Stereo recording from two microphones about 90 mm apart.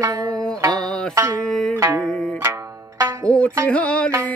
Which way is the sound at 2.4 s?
35° right (ahead or behind).